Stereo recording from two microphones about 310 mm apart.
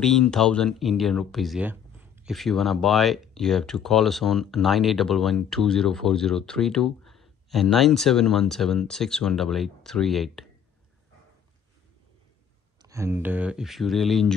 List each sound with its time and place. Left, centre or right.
0.0 s speech: centre
12.8 s speech: centre